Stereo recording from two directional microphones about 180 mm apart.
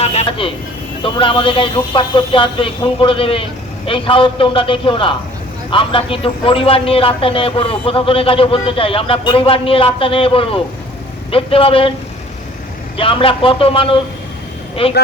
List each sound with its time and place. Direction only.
0.0 s a man's voice: 35° left (ahead or behind)
13.0 s a man's voice: 30° left (ahead or behind)